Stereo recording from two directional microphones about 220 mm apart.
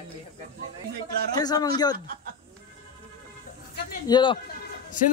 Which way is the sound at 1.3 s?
15° left (ahead or behind).